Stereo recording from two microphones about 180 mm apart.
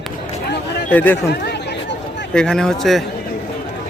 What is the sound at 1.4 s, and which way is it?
Chatter, 65° left (ahead or behind).